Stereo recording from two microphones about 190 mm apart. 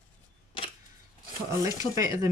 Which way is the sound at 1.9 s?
15° right (ahead or behind).